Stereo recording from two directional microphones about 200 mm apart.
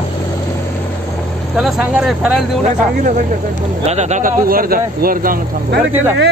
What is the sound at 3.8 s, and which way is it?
Speech, 35° right (ahead or behind).